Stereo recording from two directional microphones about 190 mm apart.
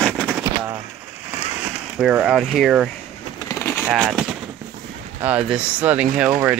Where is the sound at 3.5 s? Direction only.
15° left (ahead or behind).